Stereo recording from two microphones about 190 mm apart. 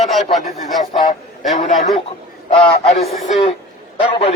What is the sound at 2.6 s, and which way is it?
Speech, 30° left (ahead or behind).